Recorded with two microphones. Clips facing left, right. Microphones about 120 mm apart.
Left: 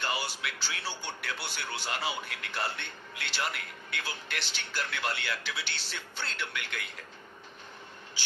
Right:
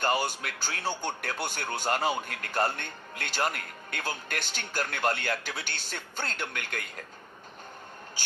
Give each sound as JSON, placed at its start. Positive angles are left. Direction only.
{"t": 0.0, "sound": "speech", "side_deg": -45}